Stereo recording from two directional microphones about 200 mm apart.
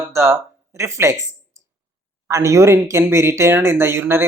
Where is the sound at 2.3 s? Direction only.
15° right (ahead or behind).